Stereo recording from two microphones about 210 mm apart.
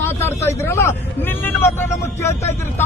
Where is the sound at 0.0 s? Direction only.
10° left (ahead or behind).